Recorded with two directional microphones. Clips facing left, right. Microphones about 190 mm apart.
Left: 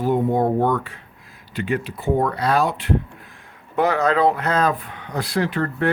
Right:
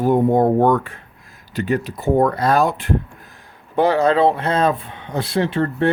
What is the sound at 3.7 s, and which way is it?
Speech, 30° right (ahead or behind).